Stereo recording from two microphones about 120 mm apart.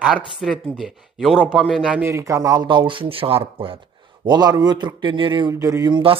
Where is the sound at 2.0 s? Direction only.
25° right (ahead or behind); by 3.8 s 50° right (ahead or behind).